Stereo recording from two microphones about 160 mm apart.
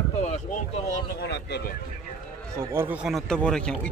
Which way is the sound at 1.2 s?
90° left.